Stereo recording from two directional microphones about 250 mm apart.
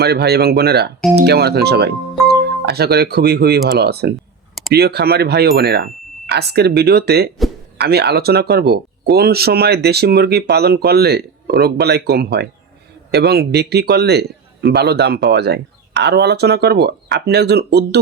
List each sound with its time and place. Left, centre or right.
0.0 s a man's voice: right